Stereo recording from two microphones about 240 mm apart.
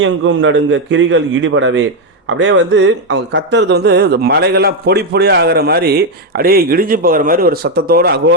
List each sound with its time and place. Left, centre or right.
0.0 s a man's voice: right